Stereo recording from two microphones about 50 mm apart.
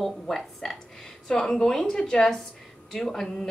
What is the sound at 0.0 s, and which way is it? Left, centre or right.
A woman's voice, centre.